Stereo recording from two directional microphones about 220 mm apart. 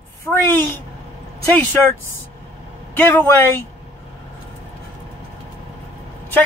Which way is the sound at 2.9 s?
10° left (ahead or behind).